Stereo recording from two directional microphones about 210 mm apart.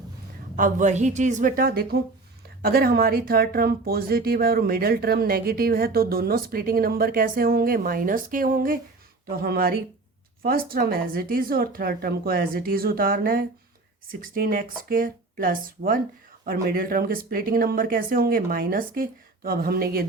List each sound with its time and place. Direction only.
0.5 s a woman's voice: 40° right (ahead or behind)